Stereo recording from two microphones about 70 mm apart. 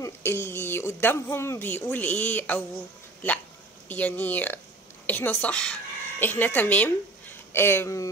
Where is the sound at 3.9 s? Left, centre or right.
Left.